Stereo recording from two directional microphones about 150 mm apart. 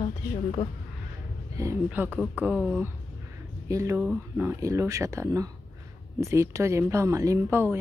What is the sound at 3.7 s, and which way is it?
Speech, 20° right (ahead or behind).